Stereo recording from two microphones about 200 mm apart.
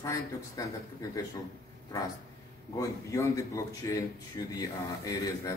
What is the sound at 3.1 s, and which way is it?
A man's voice, 15° left (ahead or behind).